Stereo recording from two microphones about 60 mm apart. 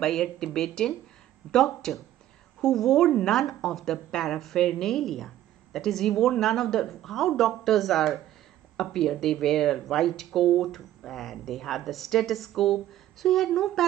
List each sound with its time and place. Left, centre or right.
0.0 s speech: centre